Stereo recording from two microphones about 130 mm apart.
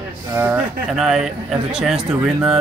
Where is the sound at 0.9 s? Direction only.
5° right (ahead or behind).